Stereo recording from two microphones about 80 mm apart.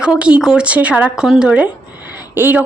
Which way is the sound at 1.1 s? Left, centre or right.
Centre.